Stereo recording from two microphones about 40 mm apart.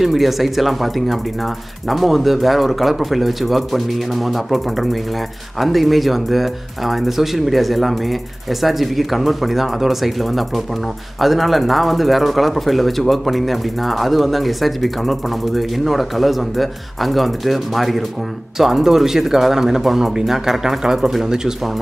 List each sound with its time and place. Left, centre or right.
0.0 s speech: centre